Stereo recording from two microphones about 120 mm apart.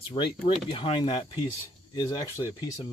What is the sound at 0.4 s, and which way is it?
Speech, 50° left (ahead or behind).